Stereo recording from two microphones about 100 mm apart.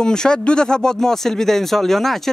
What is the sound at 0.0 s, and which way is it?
Speech, 5° left (ahead or behind).